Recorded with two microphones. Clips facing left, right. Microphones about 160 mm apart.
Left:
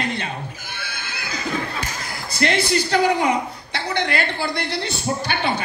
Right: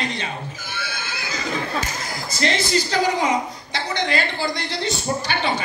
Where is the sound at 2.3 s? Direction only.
60° left (ahead or behind).